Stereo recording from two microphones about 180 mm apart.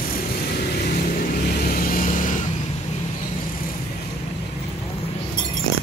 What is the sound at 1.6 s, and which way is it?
Vehicle, 55° left (ahead or behind).